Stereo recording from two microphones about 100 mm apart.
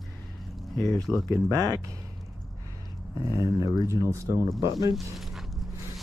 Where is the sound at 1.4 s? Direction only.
35° right (ahead or behind).